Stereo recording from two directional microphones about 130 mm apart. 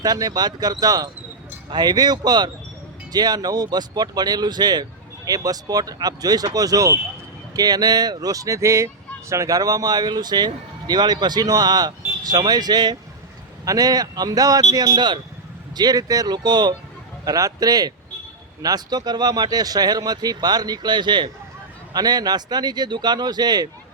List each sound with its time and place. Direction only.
0.0 s speech: 30° right (ahead or behind)